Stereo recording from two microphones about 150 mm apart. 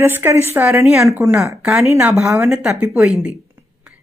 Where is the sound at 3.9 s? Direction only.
5° right (ahead or behind).